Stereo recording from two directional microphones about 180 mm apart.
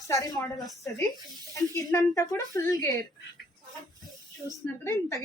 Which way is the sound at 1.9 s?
20° left (ahead or behind).